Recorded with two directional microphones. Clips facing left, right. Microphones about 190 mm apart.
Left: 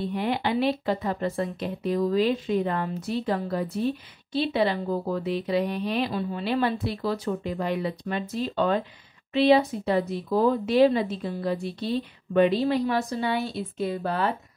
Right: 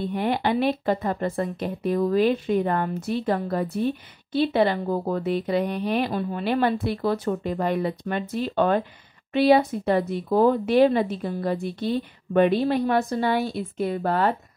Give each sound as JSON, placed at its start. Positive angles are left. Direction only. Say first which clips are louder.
{"t": 0.1, "sound": "speech", "louder": "right 4 dB", "side_deg": -50}